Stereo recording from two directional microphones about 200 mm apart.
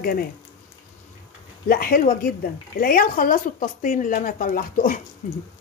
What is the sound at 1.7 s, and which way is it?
A woman's voice, 45° left (ahead or behind).